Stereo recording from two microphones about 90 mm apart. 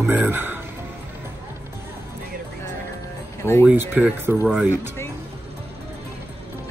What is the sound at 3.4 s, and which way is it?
Speech, 25° left (ahead or behind).